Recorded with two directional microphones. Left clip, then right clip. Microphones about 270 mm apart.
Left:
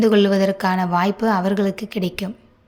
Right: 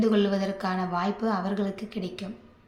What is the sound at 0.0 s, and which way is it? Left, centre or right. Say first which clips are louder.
Speech: left 9 dB; left.